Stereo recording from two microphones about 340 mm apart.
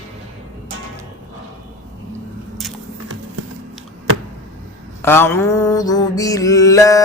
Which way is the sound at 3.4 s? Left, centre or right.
Right.